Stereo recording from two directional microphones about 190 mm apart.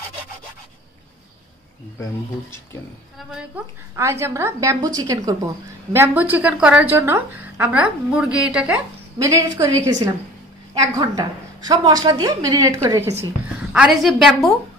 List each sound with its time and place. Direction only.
3.2 s a woman's voice: 5° right (ahead or behind)
9.2 s a woman's voice: 15° right (ahead or behind)
13.7 s a woman's voice: centre (ahead or behind)